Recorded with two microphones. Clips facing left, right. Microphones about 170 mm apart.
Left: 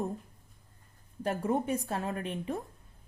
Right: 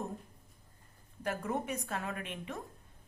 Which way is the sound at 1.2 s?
30° left (ahead or behind).